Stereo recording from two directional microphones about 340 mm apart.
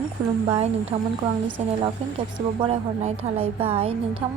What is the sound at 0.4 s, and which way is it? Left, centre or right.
A woman's voice, centre.